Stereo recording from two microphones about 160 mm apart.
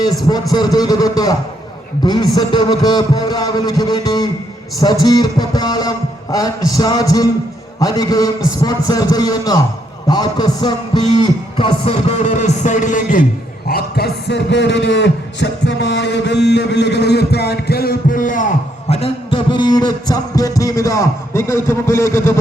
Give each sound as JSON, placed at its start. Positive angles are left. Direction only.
{"t": 0.5, "sound": "a man's voice", "side_deg": 25}
{"t": 10.1, "sound": "a sound", "side_deg": 25}
{"t": 13.7, "sound": "a man's voice", "side_deg": 75}